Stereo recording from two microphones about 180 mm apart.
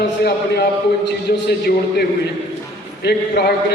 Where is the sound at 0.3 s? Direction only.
65° left (ahead or behind).